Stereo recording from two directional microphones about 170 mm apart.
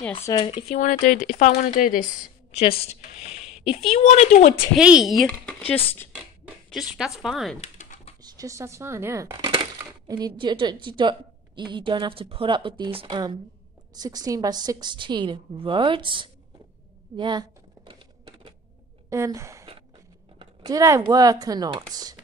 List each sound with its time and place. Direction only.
0.4 s speech: 35° left (ahead or behind); by 2.0 s 55° left (ahead or behind)
2.6 s speech: 35° left (ahead or behind)
3.2 s a sound: 5° right (ahead or behind)
3.9 s speech: 40° left (ahead or behind)
4.7 s speech: 5° right (ahead or behind)
6.7 s a woman's voice: 5° right (ahead or behind)
7.6 s typing: 45° left (ahead or behind)
8.2 s a woman's voice: 20° right (ahead or behind)
17.2 s typing: 25° right (ahead or behind)
19.0 s speech: 15° right (ahead or behind)